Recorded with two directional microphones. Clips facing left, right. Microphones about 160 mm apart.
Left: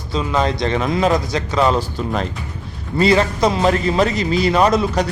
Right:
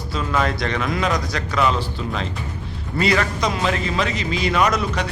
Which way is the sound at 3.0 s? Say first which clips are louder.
Left 6 dB; 30° left (ahead or behind).